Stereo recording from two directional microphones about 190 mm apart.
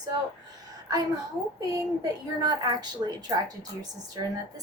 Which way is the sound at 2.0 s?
20° right (ahead or behind).